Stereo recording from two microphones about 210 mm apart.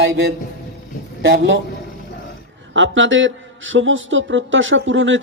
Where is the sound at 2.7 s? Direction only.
65° right (ahead or behind).